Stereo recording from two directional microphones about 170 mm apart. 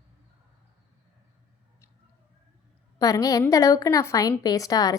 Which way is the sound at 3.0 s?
20° left (ahead or behind).